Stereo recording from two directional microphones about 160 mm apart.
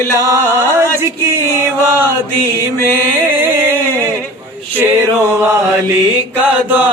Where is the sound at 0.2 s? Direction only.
15° right (ahead or behind).